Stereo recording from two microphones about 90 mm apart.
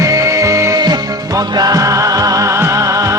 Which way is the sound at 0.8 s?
50° right (ahead or behind).